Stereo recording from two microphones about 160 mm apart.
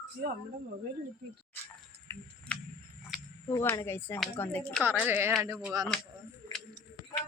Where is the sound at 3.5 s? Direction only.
15° left (ahead or behind).